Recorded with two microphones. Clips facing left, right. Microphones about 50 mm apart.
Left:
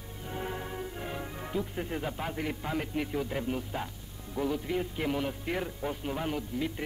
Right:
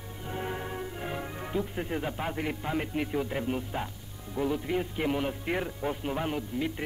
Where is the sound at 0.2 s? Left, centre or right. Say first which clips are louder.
Right 2 dB; centre.